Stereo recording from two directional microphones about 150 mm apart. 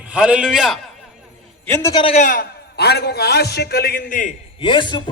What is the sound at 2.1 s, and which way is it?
A man's voice, 65° left (ahead or behind).